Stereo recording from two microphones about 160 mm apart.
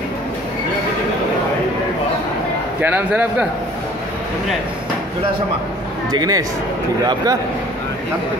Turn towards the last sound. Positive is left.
turn(degrees=-25)  # may be behind; listen again after turning